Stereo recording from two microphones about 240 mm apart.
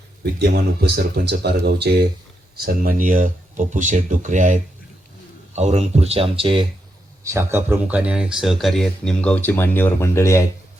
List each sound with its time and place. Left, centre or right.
0.2 s speech: right
7.3 s speech: centre